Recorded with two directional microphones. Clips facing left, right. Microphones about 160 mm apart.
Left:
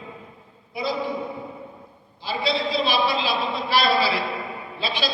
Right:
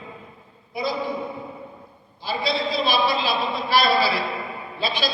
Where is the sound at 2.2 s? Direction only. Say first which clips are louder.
Even; 45° right (ahead or behind).